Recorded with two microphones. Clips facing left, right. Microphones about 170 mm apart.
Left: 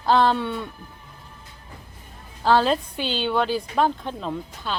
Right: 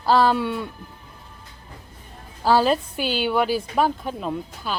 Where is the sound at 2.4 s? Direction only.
5° right (ahead or behind).